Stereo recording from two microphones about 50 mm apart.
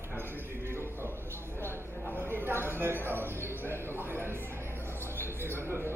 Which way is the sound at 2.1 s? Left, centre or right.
Right.